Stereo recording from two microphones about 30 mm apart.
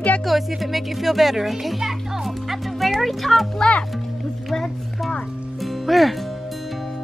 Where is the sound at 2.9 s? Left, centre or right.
Centre.